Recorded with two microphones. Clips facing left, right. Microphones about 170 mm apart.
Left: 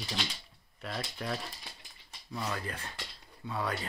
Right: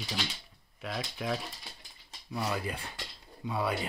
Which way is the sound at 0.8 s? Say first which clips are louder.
Right 2 dB; 5° right (ahead or behind).